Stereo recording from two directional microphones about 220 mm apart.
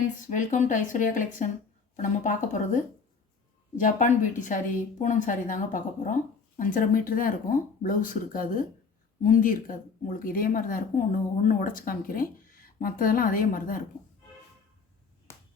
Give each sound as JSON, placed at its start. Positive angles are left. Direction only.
{"t": 0.3, "sound": "a woman's voice", "side_deg": 35}